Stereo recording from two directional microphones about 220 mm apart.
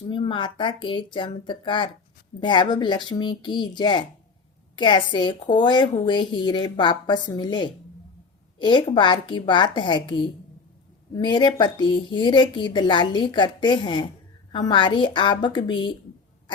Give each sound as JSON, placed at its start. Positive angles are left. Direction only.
{"t": 0.1, "sound": "a woman's voice", "side_deg": 20}